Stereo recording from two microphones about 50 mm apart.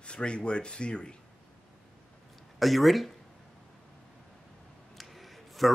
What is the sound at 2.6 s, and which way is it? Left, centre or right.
Speech, centre.